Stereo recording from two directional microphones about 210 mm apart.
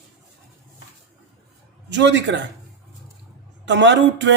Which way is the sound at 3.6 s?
60° right (ahead or behind).